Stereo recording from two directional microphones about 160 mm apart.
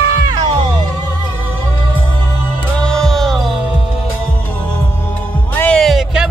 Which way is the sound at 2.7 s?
5° left (ahead or behind).